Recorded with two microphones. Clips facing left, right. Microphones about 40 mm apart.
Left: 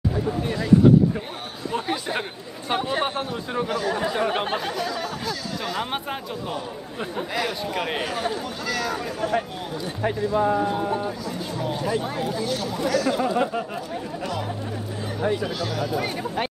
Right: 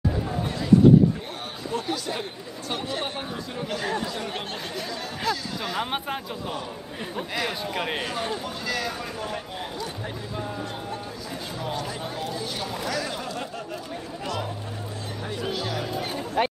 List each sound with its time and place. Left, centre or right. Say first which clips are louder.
1.7 s chatter: left 3 dB; left
3.9 s speech: left 6 dB; left
5.2 s speech: right 1 dB; centre
10.0 s speech: left 11 dB; left
11.7 s speech: left 8 dB; centre
13.2 s speech: left 10 dB; left
15.4 s speech: left 2 dB; centre